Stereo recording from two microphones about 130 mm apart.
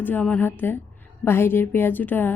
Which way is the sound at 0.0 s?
15° left (ahead or behind).